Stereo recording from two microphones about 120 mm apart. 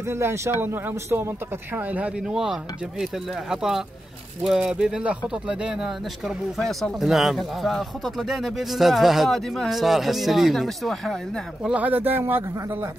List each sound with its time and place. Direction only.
0.1 s speech: 20° right (ahead or behind); by 11.1 s centre (ahead or behind)
11.6 s speech: 10° right (ahead or behind)